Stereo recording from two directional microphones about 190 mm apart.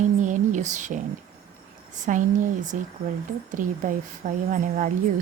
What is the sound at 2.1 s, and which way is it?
A woman's voice, 40° right (ahead or behind).